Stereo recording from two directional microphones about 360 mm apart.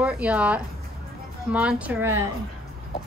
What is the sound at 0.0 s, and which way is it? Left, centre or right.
Speech, centre.